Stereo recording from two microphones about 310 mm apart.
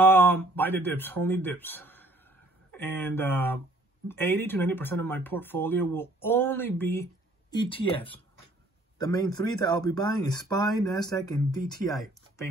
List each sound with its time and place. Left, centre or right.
0.0 s speech: centre